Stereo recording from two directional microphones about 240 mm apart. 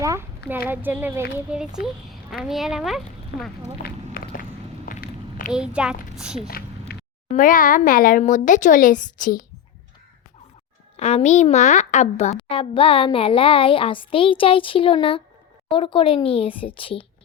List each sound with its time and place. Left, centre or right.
0.0 s a child's voice: centre
3.3 s speech: left
3.8 s walk: left
4.9 s a sound: left
5.5 s a child's voice: centre
6.9 s a sound: left
7.3 s speech: left
10.9 s a woman's voice: left